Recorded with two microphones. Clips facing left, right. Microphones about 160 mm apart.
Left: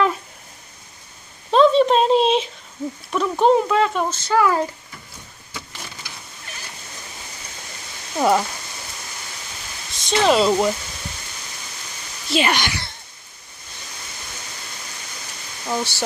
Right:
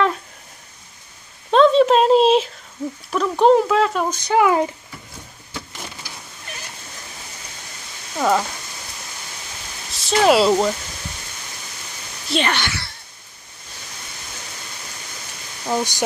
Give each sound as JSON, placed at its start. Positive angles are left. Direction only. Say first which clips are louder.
{"t": 1.5, "sound": "a sound", "louder": "right 1 dB", "side_deg": 0}
{"t": 3.1, "sound": "speech", "louder": "right 2 dB", "side_deg": 0}
{"t": 4.1, "sound": "speech", "louder": "right 2 dB", "side_deg": -15}
{"t": 9.8, "sound": "speech", "louder": "right 2 dB", "side_deg": 0}
{"t": 12.3, "sound": "speech", "louder": "left 1 dB", "side_deg": 10}
{"t": 15.6, "sound": "speech", "louder": "right 3 dB", "side_deg": -15}